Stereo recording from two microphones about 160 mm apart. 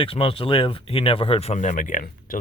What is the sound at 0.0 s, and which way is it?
Speech, 35° left (ahead or behind).